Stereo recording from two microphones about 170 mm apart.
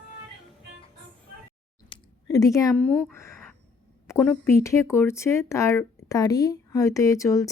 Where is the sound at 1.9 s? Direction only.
20° left (ahead or behind).